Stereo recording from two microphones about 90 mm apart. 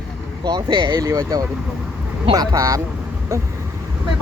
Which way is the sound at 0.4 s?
55° right (ahead or behind).